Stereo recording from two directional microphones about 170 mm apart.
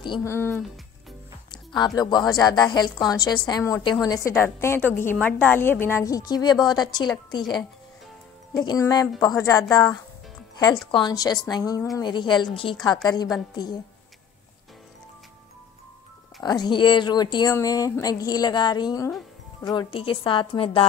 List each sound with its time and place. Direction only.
0.2 s a woman's voice: 15° left (ahead or behind)
1.5 s music: 25° left (ahead or behind)
2.0 s a woman's voice: 25° left (ahead or behind)
16.4 s a woman's voice: 25° left (ahead or behind)